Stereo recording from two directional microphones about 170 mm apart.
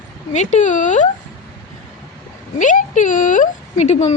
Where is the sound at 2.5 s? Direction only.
50° left (ahead or behind).